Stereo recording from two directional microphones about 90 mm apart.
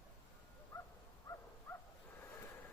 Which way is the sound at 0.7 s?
30° left (ahead or behind).